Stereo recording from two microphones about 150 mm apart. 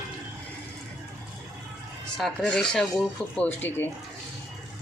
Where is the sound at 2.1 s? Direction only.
5° left (ahead or behind).